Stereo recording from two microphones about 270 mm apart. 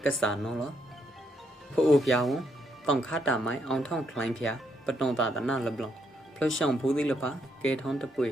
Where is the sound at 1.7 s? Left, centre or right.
Centre.